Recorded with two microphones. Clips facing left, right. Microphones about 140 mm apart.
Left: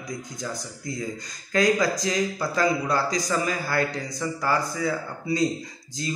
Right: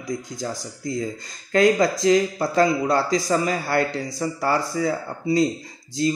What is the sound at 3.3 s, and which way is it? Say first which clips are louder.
Speech: right 4 dB; 35° right (ahead or behind).